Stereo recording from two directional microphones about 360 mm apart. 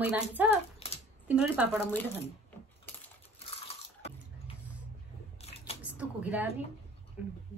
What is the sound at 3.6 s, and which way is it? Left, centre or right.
Water, centre.